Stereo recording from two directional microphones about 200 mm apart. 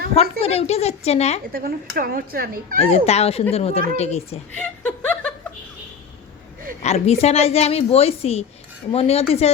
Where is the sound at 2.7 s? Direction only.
30° left (ahead or behind).